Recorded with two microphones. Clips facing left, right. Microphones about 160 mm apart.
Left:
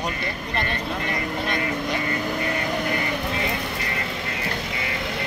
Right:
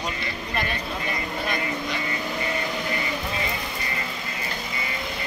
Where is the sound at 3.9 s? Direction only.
70° left (ahead or behind).